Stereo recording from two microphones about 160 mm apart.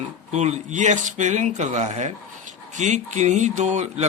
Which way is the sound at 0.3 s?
45° right (ahead or behind).